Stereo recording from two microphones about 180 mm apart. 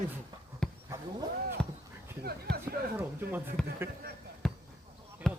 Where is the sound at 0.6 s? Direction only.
5° left (ahead or behind).